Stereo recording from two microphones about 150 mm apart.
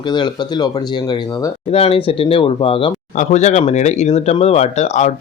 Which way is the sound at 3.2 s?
50° left (ahead or behind).